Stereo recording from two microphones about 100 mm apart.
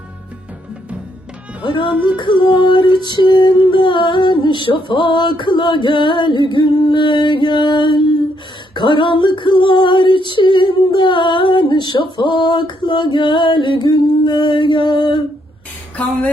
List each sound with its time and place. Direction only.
1.6 s female singing: 55° left (ahead or behind)